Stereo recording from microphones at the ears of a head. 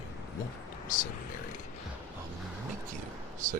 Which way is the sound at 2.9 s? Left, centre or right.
Right.